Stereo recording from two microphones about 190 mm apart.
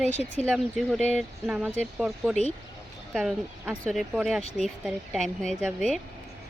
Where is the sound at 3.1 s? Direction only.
Centre (ahead or behind).